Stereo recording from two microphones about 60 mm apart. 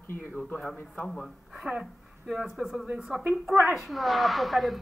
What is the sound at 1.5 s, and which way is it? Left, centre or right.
Speech, centre.